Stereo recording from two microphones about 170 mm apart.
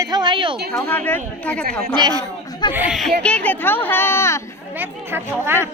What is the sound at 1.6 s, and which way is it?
Speech, 60° right (ahead or behind).